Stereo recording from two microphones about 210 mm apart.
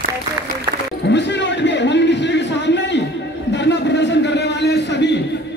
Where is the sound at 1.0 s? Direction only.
55° left (ahead or behind).